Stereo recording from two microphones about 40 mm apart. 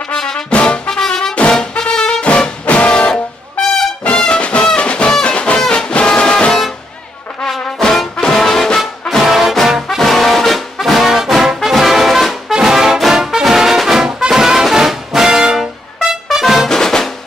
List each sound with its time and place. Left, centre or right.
0.1 s brass instrument: centre
0.5 s music: left
0.8 s music: centre
2.2 s music: left
7.8 s trombone: centre
8.2 s music: centre
9.2 s brass instrument: centre
9.8 s brass instrument: centre
12.5 s brass instrument: centre
16.6 s music: centre